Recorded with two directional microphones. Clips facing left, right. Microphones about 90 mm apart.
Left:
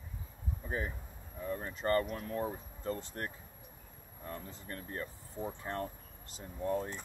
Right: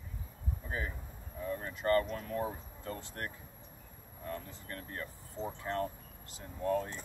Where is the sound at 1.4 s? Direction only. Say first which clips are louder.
Right 1 dB; 20° left (ahead or behind).